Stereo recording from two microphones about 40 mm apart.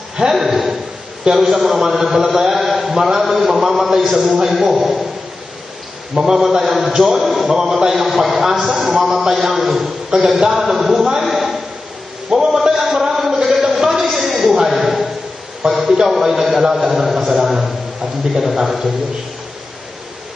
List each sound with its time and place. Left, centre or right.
0.2 s a man's voice: centre
6.3 s a man's voice: centre
8.9 s a man's voice: centre
11.1 s a sound: centre
15.7 s a man's voice: centre